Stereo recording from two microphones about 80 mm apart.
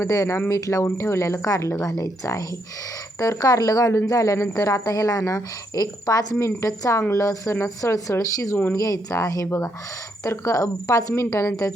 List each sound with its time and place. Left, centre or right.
0.0 s speech: left